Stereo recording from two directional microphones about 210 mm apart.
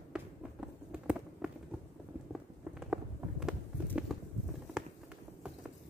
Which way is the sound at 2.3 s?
5° right (ahead or behind).